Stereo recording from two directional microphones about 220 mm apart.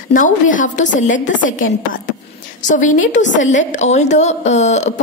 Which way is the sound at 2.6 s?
35° left (ahead or behind).